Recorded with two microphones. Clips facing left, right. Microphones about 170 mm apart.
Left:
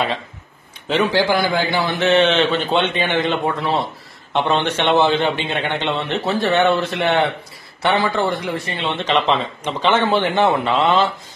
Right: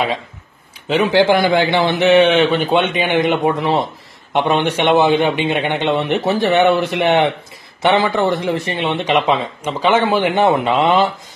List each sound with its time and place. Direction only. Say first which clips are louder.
1.1 s a man's voice: right 5 dB; 20° right (ahead or behind)
2.0 s a man's voice: right 4 dB; 10° right (ahead or behind)